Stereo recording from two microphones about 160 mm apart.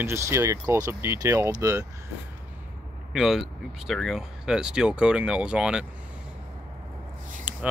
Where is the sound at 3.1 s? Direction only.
Centre (ahead or behind).